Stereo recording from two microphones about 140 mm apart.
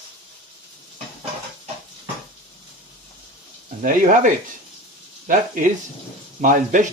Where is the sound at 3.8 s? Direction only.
70° right (ahead or behind).